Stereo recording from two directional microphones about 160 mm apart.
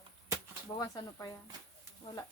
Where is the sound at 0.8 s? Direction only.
25° left (ahead or behind).